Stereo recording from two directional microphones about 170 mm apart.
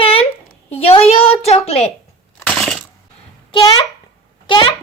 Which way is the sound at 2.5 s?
Centre (ahead or behind).